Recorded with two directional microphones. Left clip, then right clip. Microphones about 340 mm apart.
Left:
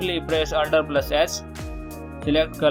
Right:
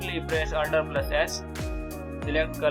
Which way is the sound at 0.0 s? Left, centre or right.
Centre.